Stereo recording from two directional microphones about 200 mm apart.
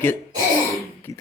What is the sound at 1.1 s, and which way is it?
Beatboxing, 15° left (ahead or behind).